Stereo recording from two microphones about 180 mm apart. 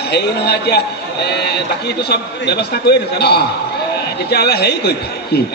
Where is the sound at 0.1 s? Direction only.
65° left (ahead or behind).